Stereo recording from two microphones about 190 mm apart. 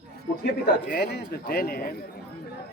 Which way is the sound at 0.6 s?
60° left (ahead or behind).